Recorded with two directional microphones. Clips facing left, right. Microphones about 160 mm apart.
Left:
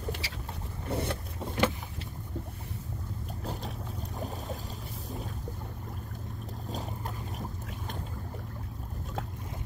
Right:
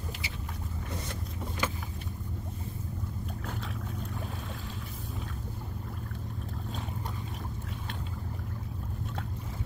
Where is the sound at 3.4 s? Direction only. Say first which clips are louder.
Left 4 dB; 35° left (ahead or behind).